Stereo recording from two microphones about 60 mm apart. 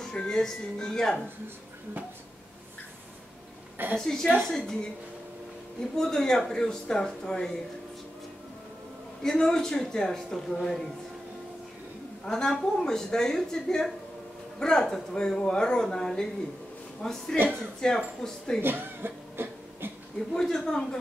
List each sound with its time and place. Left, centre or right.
0.0 s speech: centre
3.7 s a woman's voice: right
4.0 s speech: centre
5.9 s speech: centre
9.2 s speech: centre
12.3 s speech: centre
17.4 s a woman's voice: right
17.7 s speech: centre
18.6 s chuckle: right
20.3 s speech: centre